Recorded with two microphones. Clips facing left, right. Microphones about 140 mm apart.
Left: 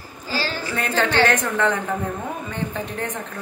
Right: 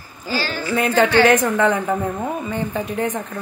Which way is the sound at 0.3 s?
30° left (ahead or behind).